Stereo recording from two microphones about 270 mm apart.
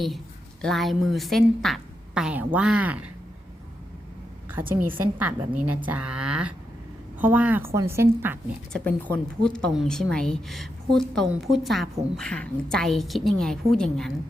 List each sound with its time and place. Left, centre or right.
0.6 s a woman's voice: centre
4.9 s a woman's voice: centre
8.7 s a woman's voice: centre